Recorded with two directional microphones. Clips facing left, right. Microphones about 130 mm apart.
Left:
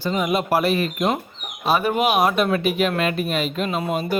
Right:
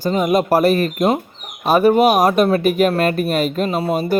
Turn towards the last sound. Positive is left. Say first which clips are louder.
# right 5 dB
turn(degrees=-40)  # may be behind; listen again after turning